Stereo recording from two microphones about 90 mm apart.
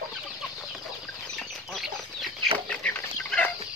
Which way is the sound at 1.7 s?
Centre (ahead or behind).